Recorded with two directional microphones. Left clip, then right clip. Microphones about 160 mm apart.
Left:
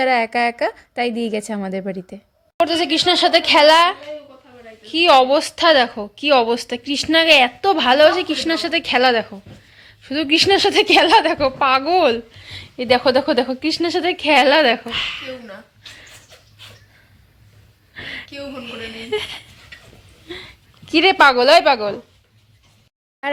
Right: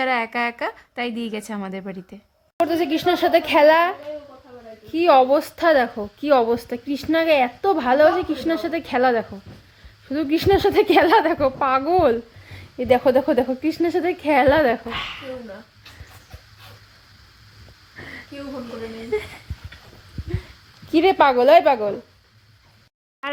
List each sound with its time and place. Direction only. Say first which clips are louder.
0.0 s a woman's voice: left 5 dB; 20° left (ahead or behind)
2.6 s a woman's voice: left 4 dB; 5° right (ahead or behind)
17.9 s a sound: left 7 dB; 5° left (ahead or behind)
19.1 s a woman's voice: left 2 dB; 5° left (ahead or behind)
20.9 s a woman's voice: left 3 dB; centre (ahead or behind)